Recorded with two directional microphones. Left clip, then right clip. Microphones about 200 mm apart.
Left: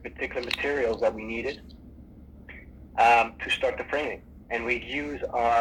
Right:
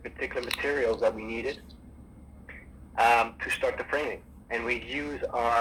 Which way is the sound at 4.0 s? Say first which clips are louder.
Left 1 dB; 25° right (ahead or behind).